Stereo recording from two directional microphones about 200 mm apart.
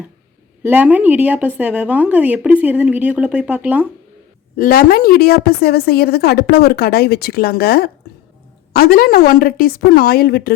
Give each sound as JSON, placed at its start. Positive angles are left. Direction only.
{"t": 0.6, "sound": "a woman's voice", "side_deg": -10}
{"t": 4.5, "sound": "a woman's voice", "side_deg": 45}